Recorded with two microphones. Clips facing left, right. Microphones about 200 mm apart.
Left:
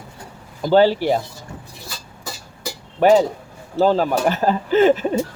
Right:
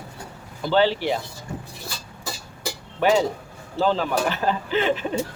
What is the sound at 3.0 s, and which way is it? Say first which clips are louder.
A child's voice: left 6 dB; 45° left (ahead or behind).